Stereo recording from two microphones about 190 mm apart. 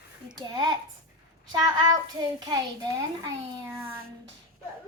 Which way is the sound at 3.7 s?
15° right (ahead or behind).